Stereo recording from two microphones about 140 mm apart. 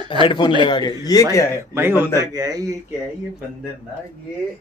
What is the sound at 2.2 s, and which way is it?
Speech, 25° right (ahead or behind).